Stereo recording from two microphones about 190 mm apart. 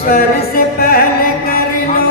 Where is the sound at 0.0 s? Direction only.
50° left (ahead or behind).